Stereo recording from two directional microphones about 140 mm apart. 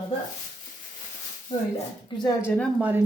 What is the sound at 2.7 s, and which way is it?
Speech, 10° right (ahead or behind).